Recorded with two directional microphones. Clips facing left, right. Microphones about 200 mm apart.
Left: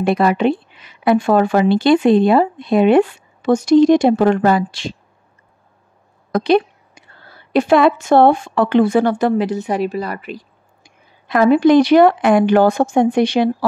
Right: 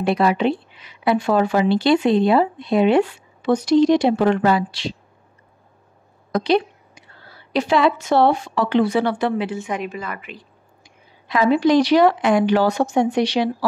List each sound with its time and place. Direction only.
0.0 s speech: 50° left (ahead or behind)
6.3 s a woman's voice: 55° left (ahead or behind)